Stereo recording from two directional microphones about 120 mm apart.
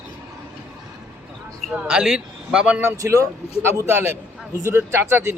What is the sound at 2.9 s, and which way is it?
Speech, 25° right (ahead or behind).